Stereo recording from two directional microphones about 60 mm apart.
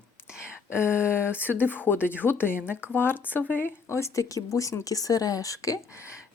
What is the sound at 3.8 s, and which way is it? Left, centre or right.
Speech, left.